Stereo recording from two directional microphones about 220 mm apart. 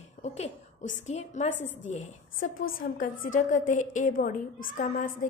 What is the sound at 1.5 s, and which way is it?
Speech, 60° left (ahead or behind).